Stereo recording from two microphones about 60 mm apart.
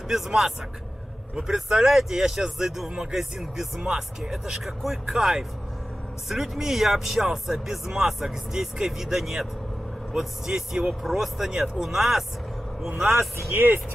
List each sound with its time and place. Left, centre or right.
0.1 s speech: centre
13.5 s speech: right